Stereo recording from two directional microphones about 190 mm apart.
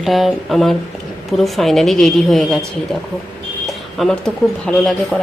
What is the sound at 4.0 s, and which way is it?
Speech, 5° left (ahead or behind).